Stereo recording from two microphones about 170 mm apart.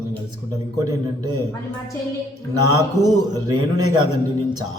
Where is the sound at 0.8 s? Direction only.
20° right (ahead or behind).